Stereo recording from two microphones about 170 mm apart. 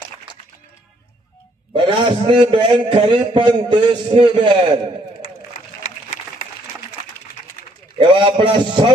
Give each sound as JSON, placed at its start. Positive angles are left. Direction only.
{"t": 1.7, "sound": "a man's voice", "side_deg": -30}
{"t": 5.8, "sound": "a sound", "side_deg": 50}
{"t": 8.0, "sound": "a man's voice", "side_deg": -30}